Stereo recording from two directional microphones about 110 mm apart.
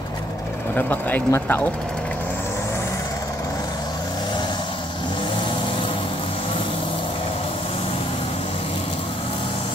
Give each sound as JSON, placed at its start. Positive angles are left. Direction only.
{"t": 0.7, "sound": "speech", "side_deg": 15}